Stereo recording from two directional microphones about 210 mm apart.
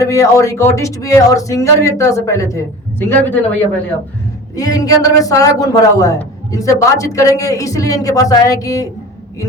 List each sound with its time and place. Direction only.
0.0 s a man's voice: 15° left (ahead or behind)
4.5 s a man's voice: 15° left (ahead or behind)